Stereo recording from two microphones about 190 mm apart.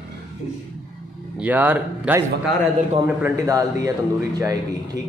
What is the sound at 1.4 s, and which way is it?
A man's voice, 10° right (ahead or behind).